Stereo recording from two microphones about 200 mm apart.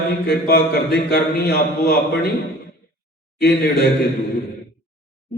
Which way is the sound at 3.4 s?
50° left (ahead or behind).